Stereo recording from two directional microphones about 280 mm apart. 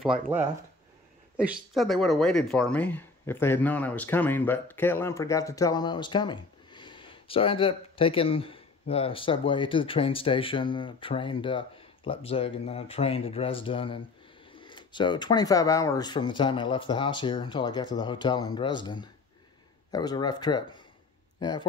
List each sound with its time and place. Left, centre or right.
0.0 s speech: centre